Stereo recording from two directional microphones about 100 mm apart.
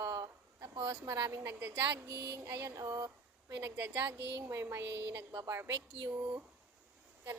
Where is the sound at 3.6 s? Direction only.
20° right (ahead or behind).